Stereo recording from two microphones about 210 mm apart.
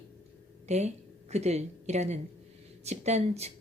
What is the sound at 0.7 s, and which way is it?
A woman's voice, 30° right (ahead or behind).